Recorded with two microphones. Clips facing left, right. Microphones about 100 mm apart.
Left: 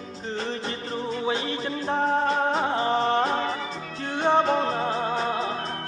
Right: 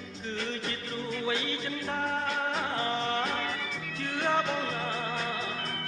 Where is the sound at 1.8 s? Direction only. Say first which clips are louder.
Left 9 dB; 30° left (ahead or behind).